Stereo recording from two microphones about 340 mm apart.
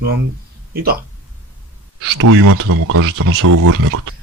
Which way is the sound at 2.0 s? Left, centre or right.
Right.